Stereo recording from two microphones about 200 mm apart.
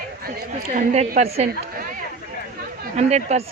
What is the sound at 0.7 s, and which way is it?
Speech, 40° right (ahead or behind).